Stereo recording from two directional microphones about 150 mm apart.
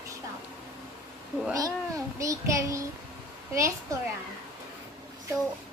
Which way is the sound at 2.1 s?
20° right (ahead or behind).